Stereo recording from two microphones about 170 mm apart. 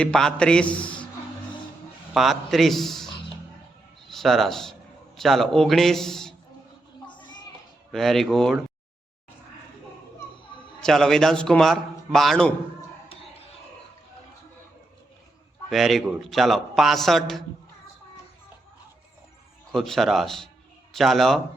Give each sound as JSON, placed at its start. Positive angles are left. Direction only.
{"t": 0.0, "sound": "a man's voice", "side_deg": 5}
{"t": 2.1, "sound": "a man's voice", "side_deg": 0}
{"t": 4.1, "sound": "a man's voice", "side_deg": 0}
{"t": 7.1, "sound": "children playing", "side_deg": 30}
{"t": 7.9, "sound": "a man's voice", "side_deg": 0}
{"t": 10.8, "sound": "a man's voice", "side_deg": 0}
{"t": 15.7, "sound": "a man's voice", "side_deg": 0}
{"t": 19.7, "sound": "a man's voice", "side_deg": 0}